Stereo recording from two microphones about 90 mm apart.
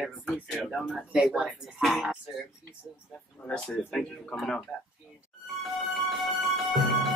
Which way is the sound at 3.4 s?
10° left (ahead or behind).